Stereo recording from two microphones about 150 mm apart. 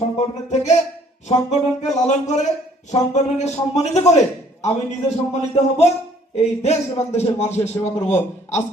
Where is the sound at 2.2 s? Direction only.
50° left (ahead or behind).